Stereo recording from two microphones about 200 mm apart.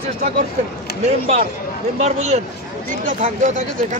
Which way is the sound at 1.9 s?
35° right (ahead or behind).